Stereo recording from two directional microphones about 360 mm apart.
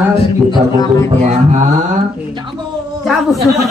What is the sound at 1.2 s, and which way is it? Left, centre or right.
Mantra, centre.